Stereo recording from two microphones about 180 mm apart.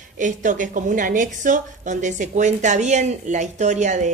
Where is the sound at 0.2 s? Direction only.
45° right (ahead or behind).